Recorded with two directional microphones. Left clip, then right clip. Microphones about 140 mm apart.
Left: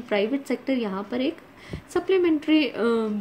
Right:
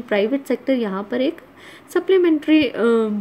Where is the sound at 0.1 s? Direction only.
15° right (ahead or behind).